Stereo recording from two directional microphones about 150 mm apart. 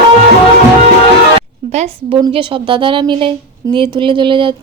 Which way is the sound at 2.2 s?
35° right (ahead or behind).